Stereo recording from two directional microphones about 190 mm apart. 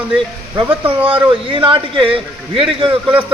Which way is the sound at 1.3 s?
25° right (ahead or behind).